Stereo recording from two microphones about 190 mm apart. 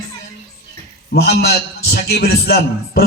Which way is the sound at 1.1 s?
60° left (ahead or behind).